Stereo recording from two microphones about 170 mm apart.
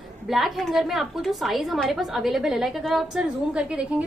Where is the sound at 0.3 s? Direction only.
Centre (ahead or behind).